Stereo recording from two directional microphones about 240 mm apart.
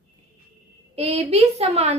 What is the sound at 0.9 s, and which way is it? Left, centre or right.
A woman's voice, right.